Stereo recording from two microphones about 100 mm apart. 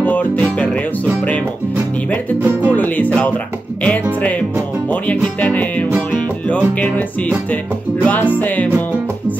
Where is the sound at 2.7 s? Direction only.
15° left (ahead or behind).